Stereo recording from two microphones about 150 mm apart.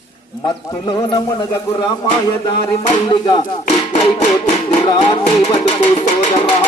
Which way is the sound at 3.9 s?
50° left (ahead or behind).